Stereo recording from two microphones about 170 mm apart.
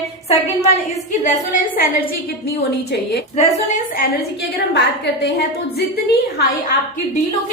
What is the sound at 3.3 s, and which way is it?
Speech, 45° left (ahead or behind).